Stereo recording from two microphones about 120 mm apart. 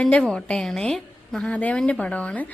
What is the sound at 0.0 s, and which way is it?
A woman's voice, 5° left (ahead or behind).